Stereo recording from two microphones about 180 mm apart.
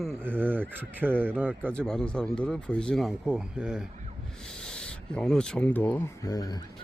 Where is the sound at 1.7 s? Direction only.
5° left (ahead or behind); by 6.6 s 20° left (ahead or behind).